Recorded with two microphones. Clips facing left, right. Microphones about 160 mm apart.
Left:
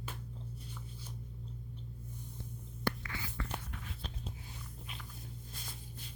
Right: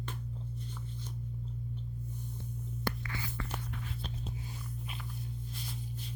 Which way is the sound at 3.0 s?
35° right (ahead or behind).